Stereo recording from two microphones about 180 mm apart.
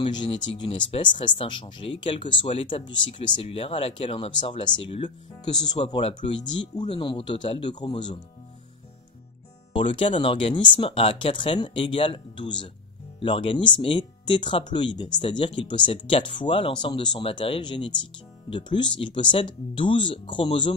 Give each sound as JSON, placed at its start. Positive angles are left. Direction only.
{"t": 0.0, "sound": "speech", "side_deg": 25}
{"t": 9.8, "sound": "speech", "side_deg": 30}